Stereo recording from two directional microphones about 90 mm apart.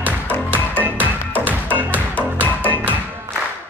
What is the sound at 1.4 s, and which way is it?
Music, 20° right (ahead or behind).